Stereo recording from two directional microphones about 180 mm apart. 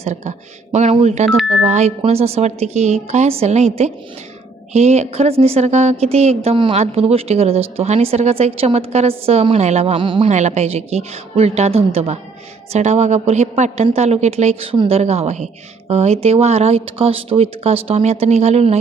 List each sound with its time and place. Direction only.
0.0 s a woman's voice: 40° right (ahead or behind)
10.2 s a woman's voice: 40° right (ahead or behind)